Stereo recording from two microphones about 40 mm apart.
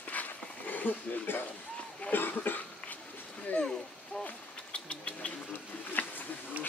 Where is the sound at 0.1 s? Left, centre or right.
Left.